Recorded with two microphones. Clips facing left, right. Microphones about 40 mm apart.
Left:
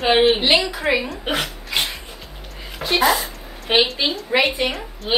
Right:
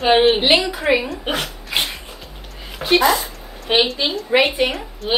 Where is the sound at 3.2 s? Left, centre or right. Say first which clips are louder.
Even; centre.